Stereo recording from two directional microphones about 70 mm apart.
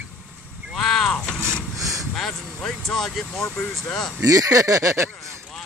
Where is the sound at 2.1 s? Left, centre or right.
Centre.